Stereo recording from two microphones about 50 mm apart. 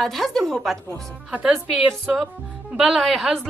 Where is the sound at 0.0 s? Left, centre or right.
Centre.